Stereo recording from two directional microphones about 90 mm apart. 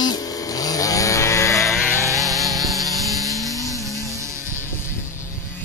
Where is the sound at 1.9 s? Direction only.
35° right (ahead or behind).